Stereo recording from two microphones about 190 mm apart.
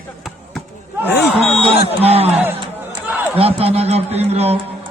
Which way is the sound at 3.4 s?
30° right (ahead or behind).